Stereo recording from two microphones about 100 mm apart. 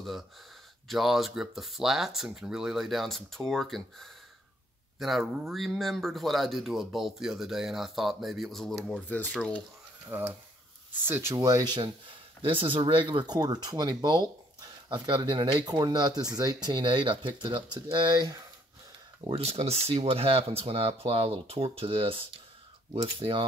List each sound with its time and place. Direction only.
0.8 s speech: centre (ahead or behind)
10.0 s speech: 20° right (ahead or behind)
11.3 s speech: 35° right (ahead or behind)
12.4 s speech: 60° right (ahead or behind); by 18.4 s 45° right (ahead or behind)
19.3 s speech: 85° right; by 23.4 s 60° right (ahead or behind)